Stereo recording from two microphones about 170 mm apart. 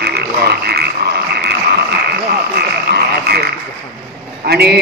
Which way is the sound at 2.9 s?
70° right (ahead or behind).